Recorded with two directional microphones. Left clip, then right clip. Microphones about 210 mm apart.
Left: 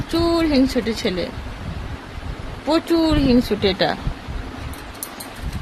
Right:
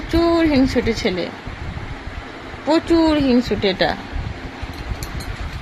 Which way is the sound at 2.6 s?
10° left (ahead or behind).